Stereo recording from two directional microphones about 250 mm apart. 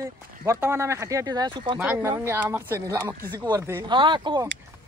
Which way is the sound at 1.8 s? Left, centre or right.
Centre.